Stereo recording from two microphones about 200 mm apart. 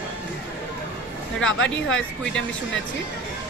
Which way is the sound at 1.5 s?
5° left (ahead or behind).